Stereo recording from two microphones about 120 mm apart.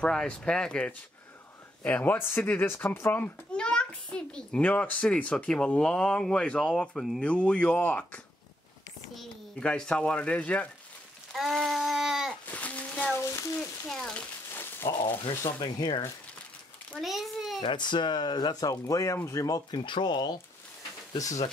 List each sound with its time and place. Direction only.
0.0 s a child's voice: 5° left (ahead or behind)
11.3 s a sound: centre (ahead or behind)
12.4 s a sound: 15° left (ahead or behind)
13.2 s speech: 25° left (ahead or behind)
13.8 s a child's voice: 5° left (ahead or behind)
14.5 s a sound: 20° left (ahead or behind)
15.6 s speech: 40° left (ahead or behind)
16.9 s a child's voice: centre (ahead or behind)
17.6 s speech: 40° left (ahead or behind)
19.8 s speech: 40° left (ahead or behind)